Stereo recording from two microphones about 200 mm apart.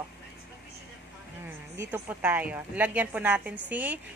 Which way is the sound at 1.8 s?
10° right (ahead or behind).